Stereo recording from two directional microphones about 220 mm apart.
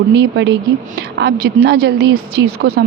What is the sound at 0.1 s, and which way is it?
A woman's voice, 50° right (ahead or behind).